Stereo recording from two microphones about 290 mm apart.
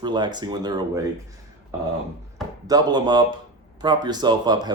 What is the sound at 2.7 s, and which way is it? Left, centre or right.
Speech, centre.